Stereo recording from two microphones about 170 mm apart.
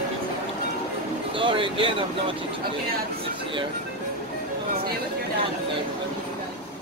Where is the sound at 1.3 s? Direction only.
30° right (ahead or behind).